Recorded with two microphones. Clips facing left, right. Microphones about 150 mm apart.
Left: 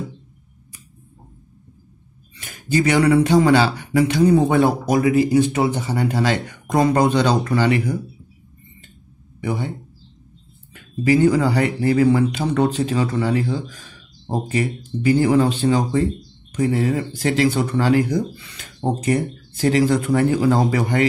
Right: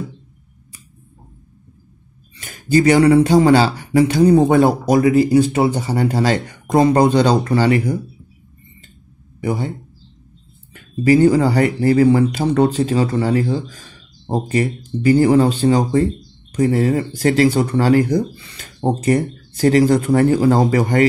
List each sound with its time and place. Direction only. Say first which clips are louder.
2.4 s speech: right 5 dB; 40° right (ahead or behind)
9.4 s speech: right 3 dB; 40° right (ahead or behind)
10.7 s speech: right 4 dB; 40° right (ahead or behind)